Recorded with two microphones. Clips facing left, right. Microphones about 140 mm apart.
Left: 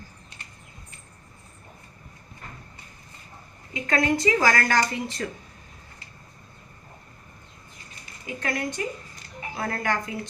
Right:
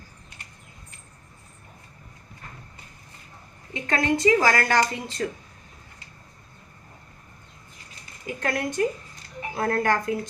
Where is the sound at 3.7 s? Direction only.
30° right (ahead or behind).